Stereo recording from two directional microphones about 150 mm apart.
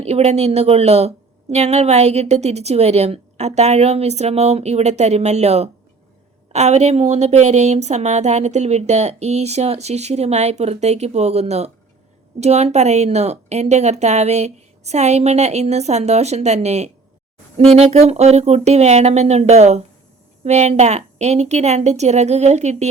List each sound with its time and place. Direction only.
0.0 s a woman's voice: 45° right (ahead or behind)